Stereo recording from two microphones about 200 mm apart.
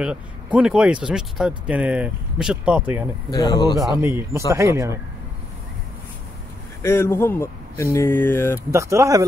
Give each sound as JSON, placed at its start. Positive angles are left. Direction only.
{"t": 0.0, "sound": "speech", "side_deg": -5}
{"t": 3.3, "sound": "speech", "side_deg": 20}
{"t": 4.0, "sound": "speech", "side_deg": -10}
{"t": 6.8, "sound": "speech", "side_deg": 15}
{"t": 8.7, "sound": "speech", "side_deg": -15}